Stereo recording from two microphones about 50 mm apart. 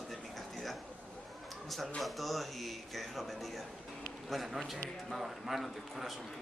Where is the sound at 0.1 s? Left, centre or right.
Centre.